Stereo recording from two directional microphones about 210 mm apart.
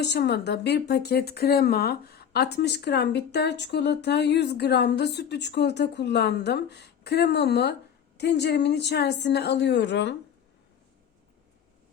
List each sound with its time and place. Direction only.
0.0 s speech: 55° left (ahead or behind)